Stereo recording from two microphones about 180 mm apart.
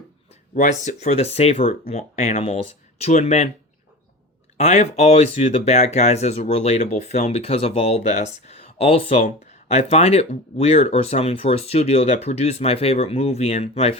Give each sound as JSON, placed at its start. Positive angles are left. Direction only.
{"t": 0.5, "sound": "speech", "side_deg": 40}
{"t": 4.5, "sound": "speech", "side_deg": 40}